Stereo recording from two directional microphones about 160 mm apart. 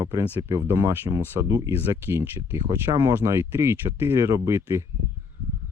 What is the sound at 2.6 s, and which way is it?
Speech, 25° right (ahead or behind).